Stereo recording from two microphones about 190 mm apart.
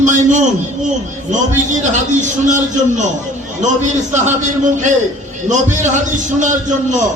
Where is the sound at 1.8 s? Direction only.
40° right (ahead or behind).